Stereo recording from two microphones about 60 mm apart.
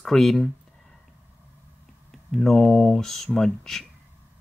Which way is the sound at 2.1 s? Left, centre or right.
Centre.